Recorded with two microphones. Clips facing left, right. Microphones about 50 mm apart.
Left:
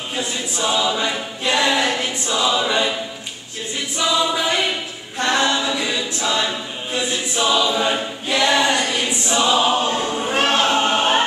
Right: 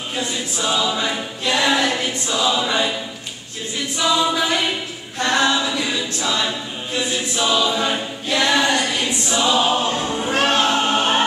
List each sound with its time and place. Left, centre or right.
0.1 s choir: centre
4.0 s choir: centre
5.2 s a capella: centre
6.4 s choir: centre